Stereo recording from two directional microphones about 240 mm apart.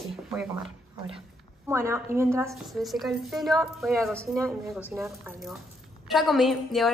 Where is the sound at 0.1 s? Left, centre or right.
Centre.